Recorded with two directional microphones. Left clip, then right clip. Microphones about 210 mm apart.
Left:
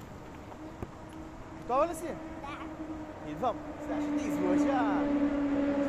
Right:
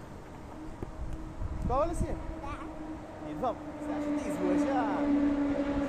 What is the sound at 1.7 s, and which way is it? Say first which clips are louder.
Speech: left 1 dB; 40° left (ahead or behind).